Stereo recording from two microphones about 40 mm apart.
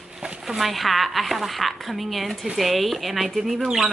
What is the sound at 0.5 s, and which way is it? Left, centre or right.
Speech, centre.